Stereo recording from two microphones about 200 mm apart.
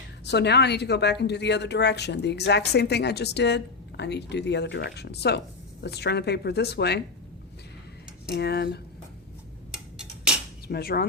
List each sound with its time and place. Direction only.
0.3 s speech: 55° left (ahead or behind)
8.3 s speech: 55° left (ahead or behind)
9.7 s tick-tock: 5° right (ahead or behind)
10.7 s speech: 50° left (ahead or behind)